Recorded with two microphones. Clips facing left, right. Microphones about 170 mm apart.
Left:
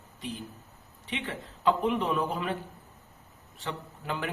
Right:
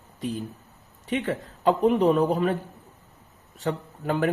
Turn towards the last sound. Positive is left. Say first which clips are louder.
# right 9 dB
turn(degrees=-45)  # may be behind; listen again after turning